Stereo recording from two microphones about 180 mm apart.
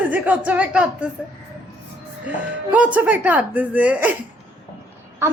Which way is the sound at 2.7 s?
10° right (ahead or behind).